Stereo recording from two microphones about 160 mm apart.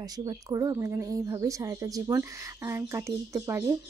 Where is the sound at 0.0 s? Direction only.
25° right (ahead or behind).